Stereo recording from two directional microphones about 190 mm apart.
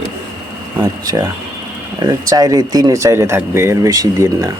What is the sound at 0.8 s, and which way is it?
Speech, 20° right (ahead or behind).